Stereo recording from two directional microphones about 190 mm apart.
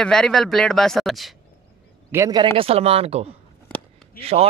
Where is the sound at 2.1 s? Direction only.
20° right (ahead or behind).